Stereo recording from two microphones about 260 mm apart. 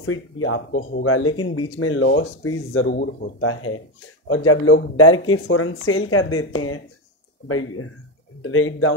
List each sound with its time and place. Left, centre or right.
0.0 s speech: left
1.0 s speech: left